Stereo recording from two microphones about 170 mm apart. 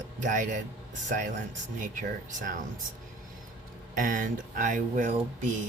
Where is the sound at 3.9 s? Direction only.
55° right (ahead or behind).